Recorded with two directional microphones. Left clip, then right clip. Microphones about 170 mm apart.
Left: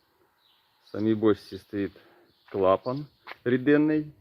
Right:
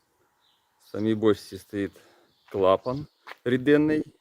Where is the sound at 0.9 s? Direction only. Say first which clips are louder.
Right 1 dB; 20° right (ahead or behind).